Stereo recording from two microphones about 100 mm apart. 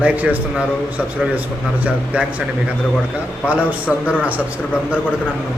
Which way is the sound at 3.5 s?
15° right (ahead or behind).